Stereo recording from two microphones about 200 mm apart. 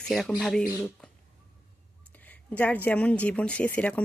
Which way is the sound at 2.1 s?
10° left (ahead or behind).